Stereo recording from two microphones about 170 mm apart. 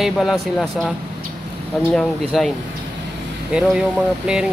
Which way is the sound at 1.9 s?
Centre (ahead or behind).